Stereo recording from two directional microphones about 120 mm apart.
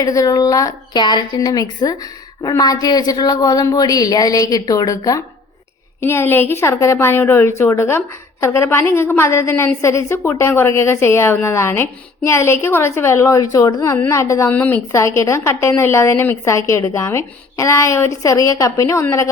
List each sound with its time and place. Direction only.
0.0 s a woman's voice: 30° left (ahead or behind)
6.0 s a woman's voice: 20° left (ahead or behind)
14.5 s a woman's voice: 15° left (ahead or behind)
14.9 s a woman's voice: 25° left (ahead or behind)